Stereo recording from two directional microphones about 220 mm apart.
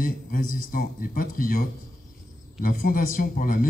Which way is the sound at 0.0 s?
40° left (ahead or behind).